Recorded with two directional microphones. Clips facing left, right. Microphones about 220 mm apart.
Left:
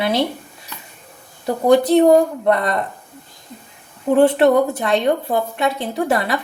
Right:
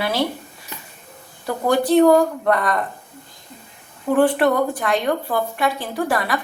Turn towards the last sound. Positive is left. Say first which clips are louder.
# left 3 dB
turn(degrees=25)  # may be behind; listen again after turning